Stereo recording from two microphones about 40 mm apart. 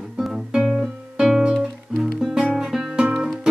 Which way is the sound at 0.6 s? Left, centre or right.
Centre.